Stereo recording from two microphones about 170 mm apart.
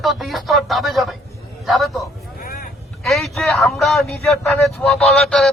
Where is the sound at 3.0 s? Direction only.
Centre (ahead or behind).